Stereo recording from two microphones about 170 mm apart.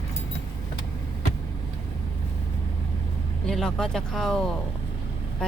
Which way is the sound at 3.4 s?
5° left (ahead or behind).